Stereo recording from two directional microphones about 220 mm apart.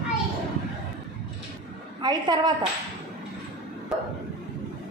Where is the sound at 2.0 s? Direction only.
20° right (ahead or behind).